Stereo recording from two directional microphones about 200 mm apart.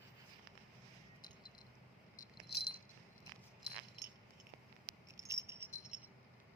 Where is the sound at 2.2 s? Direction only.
50° left (ahead or behind).